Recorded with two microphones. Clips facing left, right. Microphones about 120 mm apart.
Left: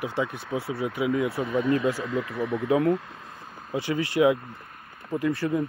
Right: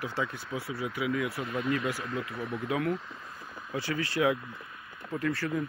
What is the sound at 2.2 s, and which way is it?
Speech, 65° left (ahead or behind).